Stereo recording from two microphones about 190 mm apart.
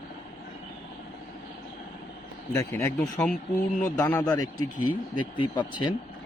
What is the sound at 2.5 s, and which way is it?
Speech, 15° left (ahead or behind).